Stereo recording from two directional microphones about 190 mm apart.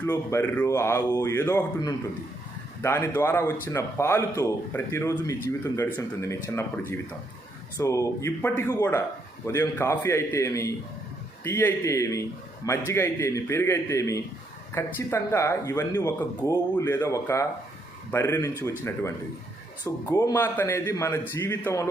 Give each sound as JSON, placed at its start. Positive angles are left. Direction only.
{"t": 0.0, "sound": "speech", "side_deg": 10}
{"t": 2.8, "sound": "speech", "side_deg": 10}
{"t": 7.8, "sound": "speech", "side_deg": 15}
{"t": 19.8, "sound": "speech", "side_deg": 20}